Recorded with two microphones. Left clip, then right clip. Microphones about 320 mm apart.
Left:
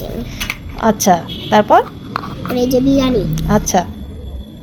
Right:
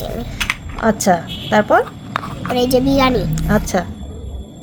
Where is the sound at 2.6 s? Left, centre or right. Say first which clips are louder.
Left 1 dB; right.